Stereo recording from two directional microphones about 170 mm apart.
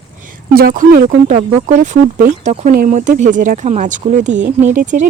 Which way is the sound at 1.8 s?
50° right (ahead or behind).